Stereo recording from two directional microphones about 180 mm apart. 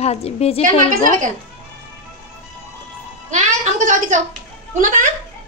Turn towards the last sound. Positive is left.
turn(degrees=-45)  # may be behind; listen again after turning